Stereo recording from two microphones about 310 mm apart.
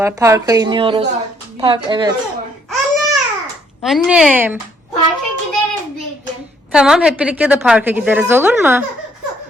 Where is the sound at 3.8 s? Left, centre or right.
Centre.